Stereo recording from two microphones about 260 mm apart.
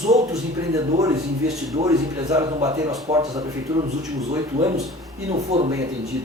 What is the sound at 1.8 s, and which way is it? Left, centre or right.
A man's voice, centre.